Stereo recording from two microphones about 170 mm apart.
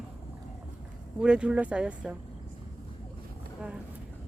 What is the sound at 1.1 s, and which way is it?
Speech, 5° right (ahead or behind).